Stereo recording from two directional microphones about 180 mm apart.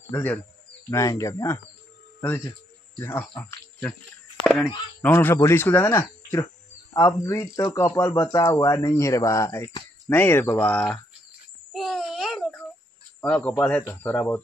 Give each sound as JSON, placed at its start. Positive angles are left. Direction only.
{"t": 0.1, "sound": "speech", "side_deg": 10}
{"t": 11.7, "sound": "a sound", "side_deg": 0}
{"t": 13.2, "sound": "speech", "side_deg": 5}